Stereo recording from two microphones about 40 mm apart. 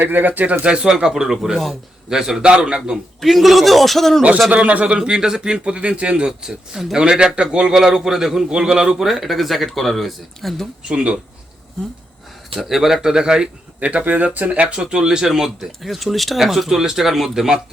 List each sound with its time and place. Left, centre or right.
0.0 s speech: right
0.6 s a man's voice: right
2.4 s speech: right
3.2 s a man's voice: centre
4.5 s speech: right
4.9 s a man's voice: right; by 10.7 s centre
10.8 s speech: right
12.5 s a man's voice: centre
13.0 s a man's voice: centre
13.7 s speech: right
14.8 s a man's voice: centre
15.8 s a man's voice: centre
16.4 s a man's voice: centre